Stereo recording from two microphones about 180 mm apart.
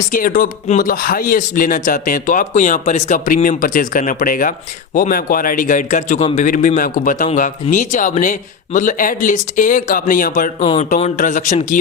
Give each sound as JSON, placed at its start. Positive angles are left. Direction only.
{"t": 0.1, "sound": "speech", "side_deg": 50}
{"t": 10.6, "sound": "speech", "side_deg": 35}
{"t": 10.8, "sound": "speech", "side_deg": 45}